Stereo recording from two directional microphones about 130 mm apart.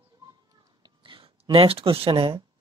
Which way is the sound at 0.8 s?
40° right (ahead or behind).